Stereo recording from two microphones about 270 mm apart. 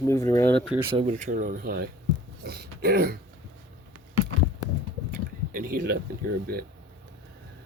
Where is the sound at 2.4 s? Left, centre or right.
Right.